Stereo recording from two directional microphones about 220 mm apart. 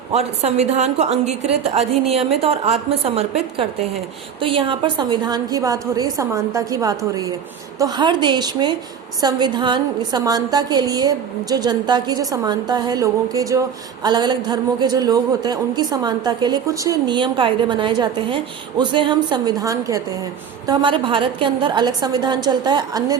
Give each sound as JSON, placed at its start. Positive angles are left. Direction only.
{"t": 0.1, "sound": "a man's voice", "side_deg": -30}